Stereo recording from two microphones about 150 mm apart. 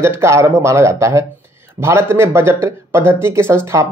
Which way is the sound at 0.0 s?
20° right (ahead or behind).